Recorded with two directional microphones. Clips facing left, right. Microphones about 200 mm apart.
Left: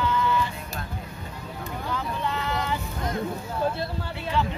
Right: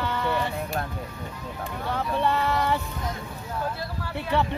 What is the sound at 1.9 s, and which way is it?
Vehicle, 65° right (ahead or behind).